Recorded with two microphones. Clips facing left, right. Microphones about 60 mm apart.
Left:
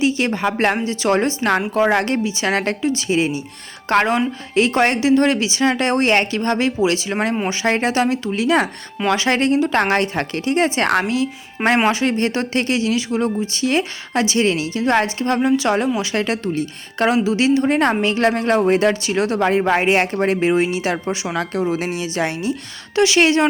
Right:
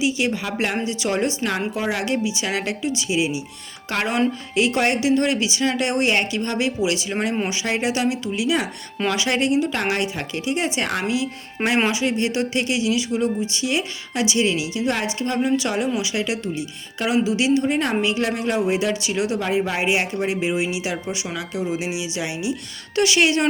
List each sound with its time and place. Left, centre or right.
0.0 s speech: left
1.7 s speech: left
7.5 s speech: left
23.0 s speech: left